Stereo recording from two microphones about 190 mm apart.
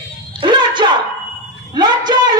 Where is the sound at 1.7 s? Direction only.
20° right (ahead or behind).